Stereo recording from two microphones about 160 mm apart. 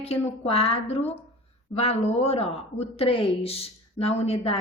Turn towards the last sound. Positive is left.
turn(degrees=40)  # may be behind; listen again after turning